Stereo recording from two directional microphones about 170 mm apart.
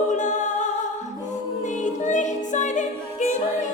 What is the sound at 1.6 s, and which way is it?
Music, 45° left (ahead or behind).